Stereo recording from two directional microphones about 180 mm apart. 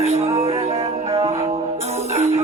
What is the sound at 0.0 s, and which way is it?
Music, 35° right (ahead or behind).